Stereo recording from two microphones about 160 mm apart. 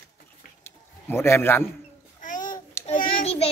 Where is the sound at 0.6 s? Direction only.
15° left (ahead or behind).